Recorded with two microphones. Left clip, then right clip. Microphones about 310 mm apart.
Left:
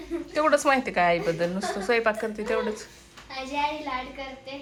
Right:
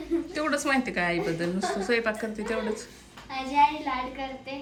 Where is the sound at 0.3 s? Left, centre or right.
Centre.